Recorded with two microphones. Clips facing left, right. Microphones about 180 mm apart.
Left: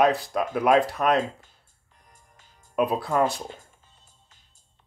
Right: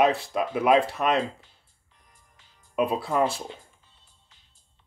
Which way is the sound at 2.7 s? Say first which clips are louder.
Left 1 dB; centre (ahead or behind).